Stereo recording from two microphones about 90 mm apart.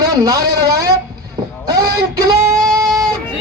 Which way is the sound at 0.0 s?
45° right (ahead or behind).